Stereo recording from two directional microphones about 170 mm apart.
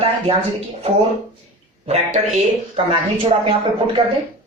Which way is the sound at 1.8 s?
40° right (ahead or behind).